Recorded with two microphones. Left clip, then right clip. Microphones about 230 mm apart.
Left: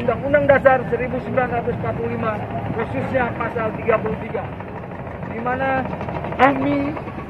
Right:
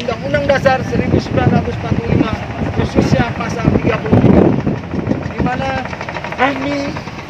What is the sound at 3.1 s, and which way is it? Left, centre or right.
Speech, right.